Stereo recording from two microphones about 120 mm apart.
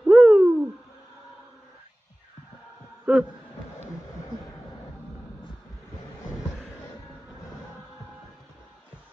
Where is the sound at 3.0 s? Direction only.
10° right (ahead or behind).